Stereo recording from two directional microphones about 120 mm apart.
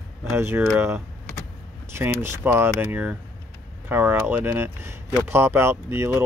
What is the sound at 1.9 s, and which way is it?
Speech, 20° right (ahead or behind).